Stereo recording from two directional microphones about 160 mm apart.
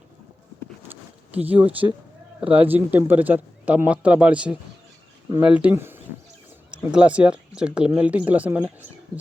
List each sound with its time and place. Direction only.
0.9 s a sound: 10° right (ahead or behind)
2.4 s speech: 35° right (ahead or behind)
2.6 s speech: 10° right (ahead or behind)